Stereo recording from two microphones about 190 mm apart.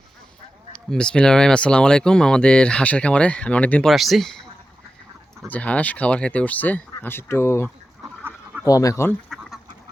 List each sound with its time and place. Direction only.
0.9 s speech: 5° left (ahead or behind)
5.5 s speech: 5° left (ahead or behind)